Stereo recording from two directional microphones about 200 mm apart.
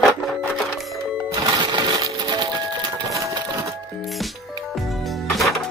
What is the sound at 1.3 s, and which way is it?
Music, 20° right (ahead or behind).